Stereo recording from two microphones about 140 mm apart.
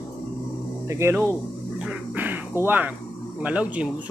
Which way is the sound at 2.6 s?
10° right (ahead or behind).